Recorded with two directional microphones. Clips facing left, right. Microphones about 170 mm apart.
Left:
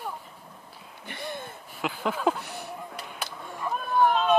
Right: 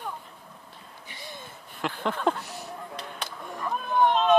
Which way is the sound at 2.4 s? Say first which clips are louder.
Left 1 dB; 60° left (ahead or behind).